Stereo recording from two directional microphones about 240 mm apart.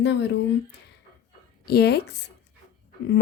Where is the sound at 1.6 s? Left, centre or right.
Left.